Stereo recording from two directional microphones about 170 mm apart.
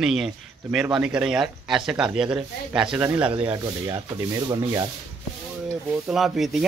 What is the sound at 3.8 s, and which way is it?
Speech, 20° right (ahead or behind).